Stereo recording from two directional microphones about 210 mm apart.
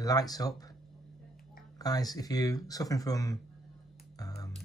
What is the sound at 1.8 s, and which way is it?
Speech, 20° left (ahead or behind).